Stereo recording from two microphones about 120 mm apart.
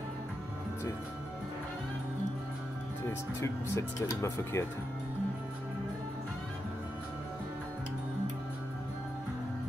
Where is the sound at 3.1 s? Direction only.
25° left (ahead or behind).